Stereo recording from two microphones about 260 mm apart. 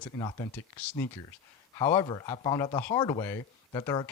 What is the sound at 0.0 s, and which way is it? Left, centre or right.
Speech, centre.